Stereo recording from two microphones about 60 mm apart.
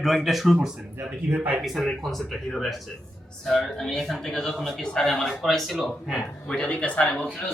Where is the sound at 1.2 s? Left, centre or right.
Right.